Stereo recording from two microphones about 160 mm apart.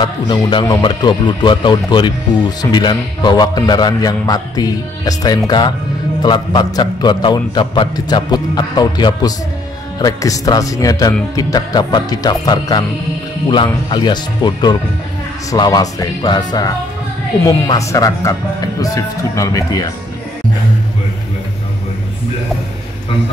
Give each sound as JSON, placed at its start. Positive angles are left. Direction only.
{"t": 0.0, "sound": "a man's voice", "side_deg": 30}